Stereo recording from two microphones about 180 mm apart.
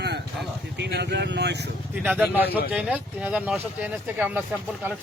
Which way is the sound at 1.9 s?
10° right (ahead or behind).